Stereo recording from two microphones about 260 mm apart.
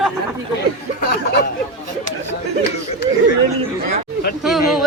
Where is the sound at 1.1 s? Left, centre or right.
Left.